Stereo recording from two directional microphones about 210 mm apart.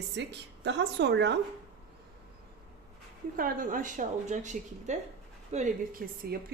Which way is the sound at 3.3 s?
40° right (ahead or behind).